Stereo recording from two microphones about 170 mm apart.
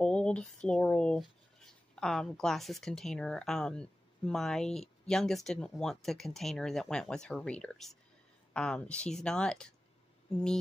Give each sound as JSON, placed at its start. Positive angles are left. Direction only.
{"t": 0.0, "sound": "speech", "side_deg": 5}